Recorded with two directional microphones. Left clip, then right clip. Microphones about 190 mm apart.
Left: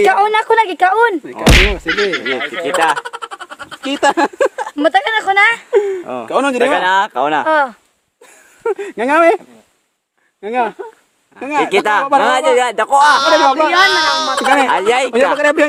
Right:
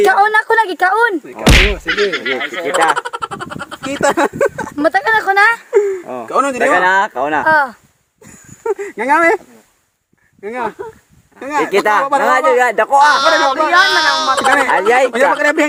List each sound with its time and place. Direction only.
0.0 s speech: centre (ahead or behind)
4.0 s speech: 55° left (ahead or behind)
4.8 s speech: centre (ahead or behind)
6.2 s speech: 60° left (ahead or behind)
6.6 s speech: 15° left (ahead or behind)
8.6 s speech: 65° left (ahead or behind)
10.4 s speech: 65° left (ahead or behind)
11.6 s speech: 20° left (ahead or behind)
12.7 s speech: 10° left (ahead or behind)
13.0 s speech: centre (ahead or behind)
14.7 s speech: 15° left (ahead or behind)
15.4 s speech: 65° left (ahead or behind)